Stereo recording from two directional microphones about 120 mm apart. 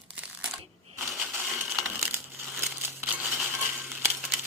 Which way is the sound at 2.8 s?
20° right (ahead or behind).